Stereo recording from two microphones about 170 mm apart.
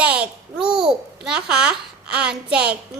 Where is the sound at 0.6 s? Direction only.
30° right (ahead or behind).